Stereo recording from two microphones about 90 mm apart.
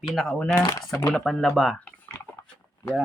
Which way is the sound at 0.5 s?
35° left (ahead or behind).